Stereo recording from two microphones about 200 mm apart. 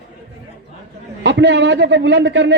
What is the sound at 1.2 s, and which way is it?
A man's voice, 65° right (ahead or behind).